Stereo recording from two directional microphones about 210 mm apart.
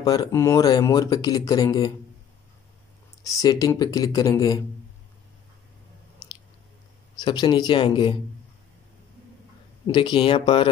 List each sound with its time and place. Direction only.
0.0 s speech: 20° left (ahead or behind)
3.3 s speech: 15° left (ahead or behind)
7.2 s speech: 20° left (ahead or behind)
9.8 s speech: 20° left (ahead or behind)